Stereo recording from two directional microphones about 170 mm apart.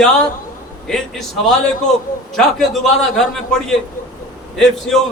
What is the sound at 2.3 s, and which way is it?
Speech, centre (ahead or behind).